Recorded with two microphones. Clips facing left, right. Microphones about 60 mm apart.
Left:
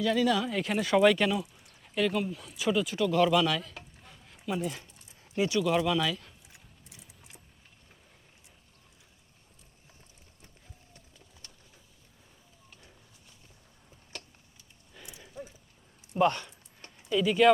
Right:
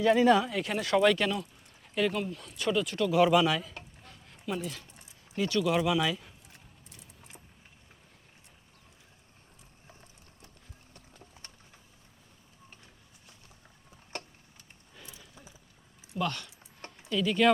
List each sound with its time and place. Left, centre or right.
0.0 s speech: right
0.4 s speech: centre
3.2 s speech: centre
4.0 s a sound: centre
5.5 s speech: centre
6.5 s a sound: centre
15.0 s a sound: centre
16.1 s speech: left
17.1 s speech: centre